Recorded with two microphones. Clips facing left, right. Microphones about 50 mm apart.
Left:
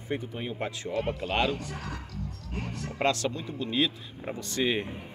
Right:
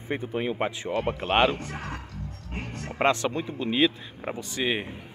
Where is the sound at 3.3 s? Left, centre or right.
Right.